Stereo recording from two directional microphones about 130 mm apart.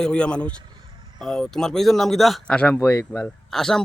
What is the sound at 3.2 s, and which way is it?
Speech, 5° left (ahead or behind).